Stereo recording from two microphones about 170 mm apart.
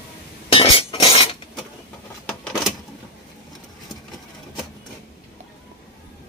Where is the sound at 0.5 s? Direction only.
30° left (ahead or behind).